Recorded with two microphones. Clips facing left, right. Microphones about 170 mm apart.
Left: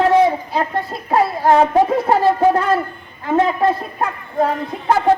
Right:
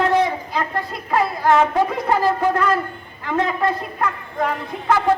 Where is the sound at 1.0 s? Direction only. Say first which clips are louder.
Left 3 dB; 35° left (ahead or behind).